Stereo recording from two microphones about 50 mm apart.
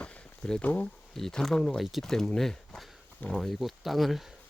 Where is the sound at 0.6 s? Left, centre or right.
Left.